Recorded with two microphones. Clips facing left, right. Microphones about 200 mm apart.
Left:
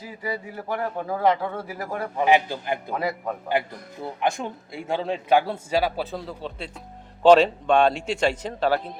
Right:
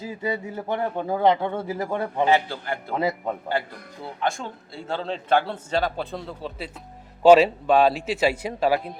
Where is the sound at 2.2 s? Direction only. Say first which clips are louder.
Left 3 dB; 15° left (ahead or behind).